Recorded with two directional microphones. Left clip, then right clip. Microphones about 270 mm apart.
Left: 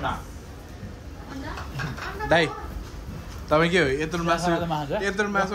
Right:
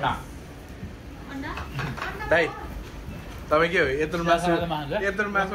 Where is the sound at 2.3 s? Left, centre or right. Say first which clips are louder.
Left 1 dB; left.